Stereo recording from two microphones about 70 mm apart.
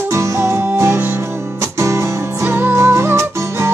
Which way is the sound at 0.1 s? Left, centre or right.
Right.